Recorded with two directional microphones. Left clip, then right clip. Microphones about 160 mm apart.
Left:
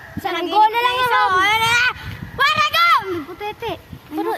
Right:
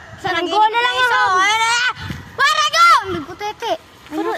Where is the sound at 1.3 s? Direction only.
45° right (ahead or behind); by 3.7 s 65° right (ahead or behind).